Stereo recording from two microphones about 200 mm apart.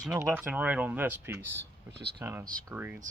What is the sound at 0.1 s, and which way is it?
Speech, 10° right (ahead or behind).